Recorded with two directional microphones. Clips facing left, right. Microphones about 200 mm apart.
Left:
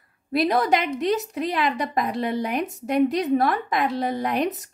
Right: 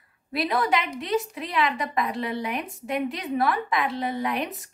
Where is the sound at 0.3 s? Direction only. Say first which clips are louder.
Left 4 dB; 45° left (ahead or behind).